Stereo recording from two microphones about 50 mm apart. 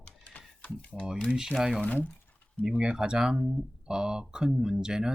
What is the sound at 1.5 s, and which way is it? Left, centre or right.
Speech, centre.